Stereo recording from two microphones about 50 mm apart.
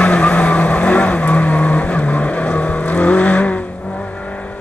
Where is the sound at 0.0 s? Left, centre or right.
Left.